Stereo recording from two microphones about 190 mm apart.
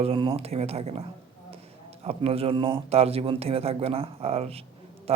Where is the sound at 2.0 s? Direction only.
30° right (ahead or behind).